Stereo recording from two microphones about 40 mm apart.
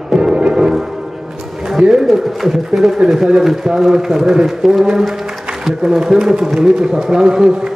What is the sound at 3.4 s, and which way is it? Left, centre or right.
A man's voice, centre.